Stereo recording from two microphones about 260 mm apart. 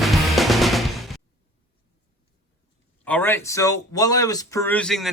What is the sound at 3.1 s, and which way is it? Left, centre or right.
Speech, centre.